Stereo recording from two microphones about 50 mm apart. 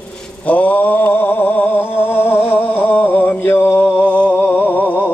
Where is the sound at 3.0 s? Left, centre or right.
Left.